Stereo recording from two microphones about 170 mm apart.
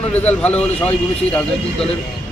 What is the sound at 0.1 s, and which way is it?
Speech, 10° left (ahead or behind).